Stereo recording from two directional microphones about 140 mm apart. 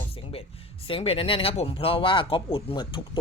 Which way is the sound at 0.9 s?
45° left (ahead or behind).